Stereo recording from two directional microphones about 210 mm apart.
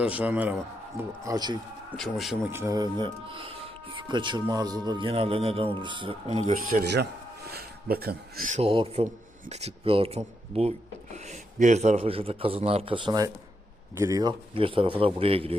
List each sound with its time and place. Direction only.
0.0 s a man's voice: 5° right (ahead or behind)
1.2 s a man's voice: 20° right (ahead or behind)
2.0 s speech: centre (ahead or behind)
2.6 s speech: 15° right (ahead or behind)
6.5 s speech: 40° right (ahead or behind)